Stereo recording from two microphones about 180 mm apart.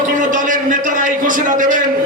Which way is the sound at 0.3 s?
45° right (ahead or behind).